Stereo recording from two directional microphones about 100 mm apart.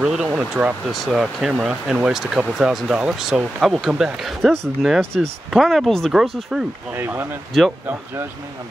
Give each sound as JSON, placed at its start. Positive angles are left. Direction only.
{"t": 0.0, "sound": "speech", "side_deg": -5}
{"t": 6.9, "sound": "speech", "side_deg": -20}
{"t": 7.5, "sound": "speech", "side_deg": 0}